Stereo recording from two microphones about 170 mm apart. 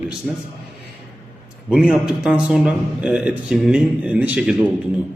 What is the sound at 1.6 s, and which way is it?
Speech, 5° right (ahead or behind).